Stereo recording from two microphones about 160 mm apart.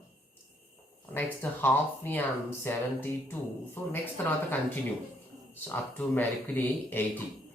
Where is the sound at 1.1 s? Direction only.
10° left (ahead or behind).